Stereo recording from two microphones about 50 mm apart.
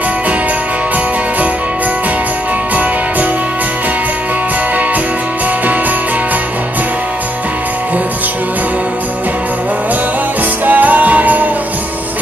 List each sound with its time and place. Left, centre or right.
10.6 s music: right